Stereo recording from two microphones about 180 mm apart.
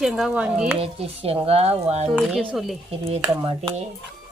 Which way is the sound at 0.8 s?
35° right (ahead or behind).